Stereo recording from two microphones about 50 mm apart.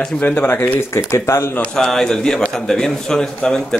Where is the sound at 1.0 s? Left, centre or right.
Left.